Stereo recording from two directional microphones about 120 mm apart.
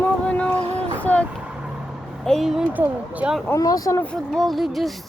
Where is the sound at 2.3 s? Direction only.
Centre (ahead or behind).